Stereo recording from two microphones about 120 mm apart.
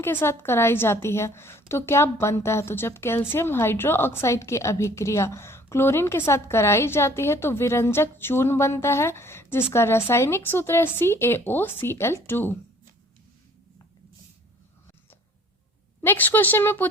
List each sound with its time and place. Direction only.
0.0 s a woman's voice: 20° left (ahead or behind)
16.0 s speech: 15° left (ahead or behind)